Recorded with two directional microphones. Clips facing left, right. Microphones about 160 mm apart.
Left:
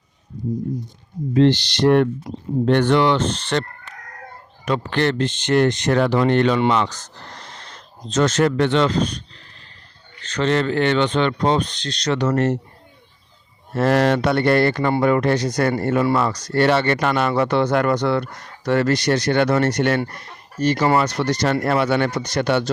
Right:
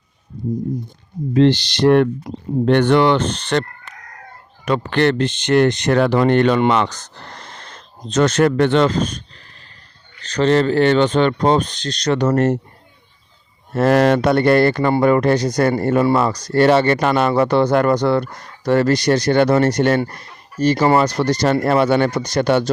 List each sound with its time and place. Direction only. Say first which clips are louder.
1.3 s speech: right 2 dB; 90° right
2.3 s speech: right 2 dB; 60° right (ahead or behind)
4.6 s speech: right 4 dB; 60° right (ahead or behind); by 9.2 s 45° right (ahead or behind)
10.2 s speech: right 4 dB; 35° right (ahead or behind)
13.7 s speech: right 3 dB; 45° right (ahead or behind)